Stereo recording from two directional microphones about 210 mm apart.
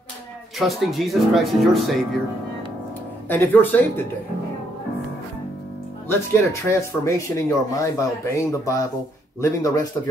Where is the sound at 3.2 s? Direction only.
10° left (ahead or behind).